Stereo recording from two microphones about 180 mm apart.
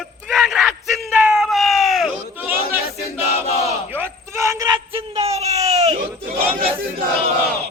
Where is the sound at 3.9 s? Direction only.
15° right (ahead or behind).